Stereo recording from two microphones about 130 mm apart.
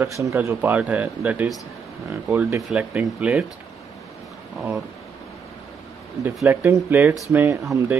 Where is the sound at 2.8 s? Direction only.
10° right (ahead or behind).